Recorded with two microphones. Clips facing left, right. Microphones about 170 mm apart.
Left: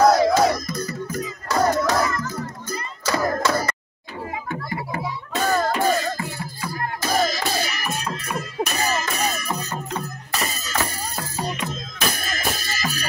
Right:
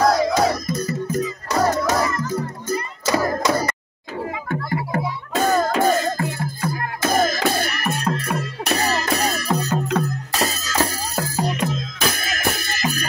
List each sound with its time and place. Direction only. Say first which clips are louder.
0.0 s music: left 2 dB; centre (ahead or behind)
0.7 s music: right 4 dB; 25° right (ahead or behind)
5.8 s music: right 3 dB; 50° right (ahead or behind)